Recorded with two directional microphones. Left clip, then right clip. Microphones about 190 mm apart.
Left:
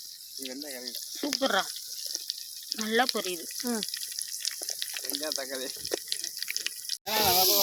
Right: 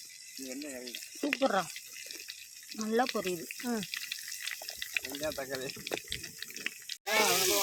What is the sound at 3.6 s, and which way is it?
Speech, 55° left (ahead or behind).